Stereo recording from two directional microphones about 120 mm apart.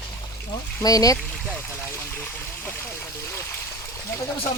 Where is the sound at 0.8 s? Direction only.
30° left (ahead or behind).